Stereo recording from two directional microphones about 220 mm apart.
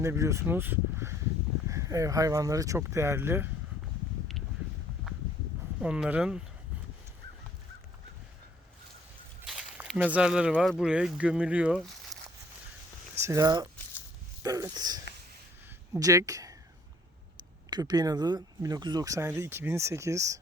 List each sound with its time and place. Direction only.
0.0 s speech: 15° right (ahead or behind)
5.8 s speech: 5° right (ahead or behind)
9.5 s speech: 5° right (ahead or behind)
13.1 s speech: 15° right (ahead or behind)
17.7 s speech: 20° right (ahead or behind)